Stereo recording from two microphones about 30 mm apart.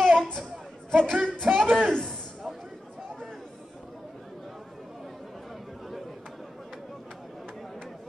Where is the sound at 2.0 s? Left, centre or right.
Centre.